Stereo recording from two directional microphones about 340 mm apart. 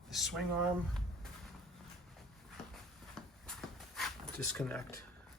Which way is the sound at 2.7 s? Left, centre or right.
Centre.